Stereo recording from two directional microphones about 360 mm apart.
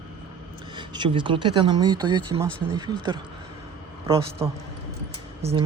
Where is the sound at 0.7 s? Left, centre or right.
Centre.